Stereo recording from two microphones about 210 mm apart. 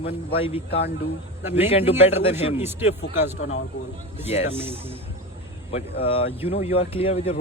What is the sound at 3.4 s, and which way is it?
Speech, 70° left (ahead or behind).